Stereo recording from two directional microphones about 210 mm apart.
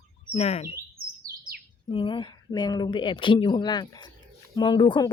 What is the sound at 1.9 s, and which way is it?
Speech, 25° left (ahead or behind).